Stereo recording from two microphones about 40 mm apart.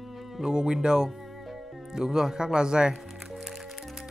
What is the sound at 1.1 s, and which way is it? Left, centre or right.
Speech, centre.